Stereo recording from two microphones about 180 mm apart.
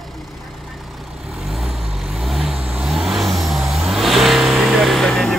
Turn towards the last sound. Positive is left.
turn(degrees=0)  # may be behind; listen again after turning